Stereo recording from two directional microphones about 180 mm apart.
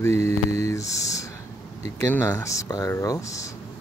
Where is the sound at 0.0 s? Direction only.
15° left (ahead or behind).